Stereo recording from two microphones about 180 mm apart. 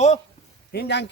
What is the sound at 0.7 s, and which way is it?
Speech, 70° left (ahead or behind).